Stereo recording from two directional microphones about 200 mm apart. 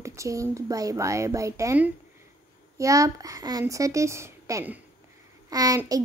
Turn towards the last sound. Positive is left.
turn(degrees=-15)  # may be behind; listen again after turning